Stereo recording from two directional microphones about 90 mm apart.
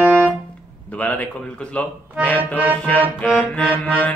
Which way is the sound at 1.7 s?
15° left (ahead or behind).